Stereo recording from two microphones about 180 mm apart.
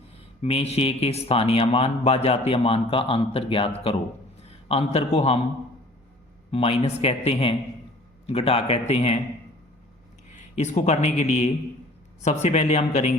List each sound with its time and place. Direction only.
0.4 s speech: 35° left (ahead or behind)
4.7 s speech: 35° left (ahead or behind)
6.5 s speech: 35° left (ahead or behind)
10.2 s speech: 40° left (ahead or behind)